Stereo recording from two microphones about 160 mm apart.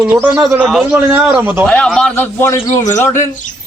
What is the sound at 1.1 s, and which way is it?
Speech, 15° right (ahead or behind).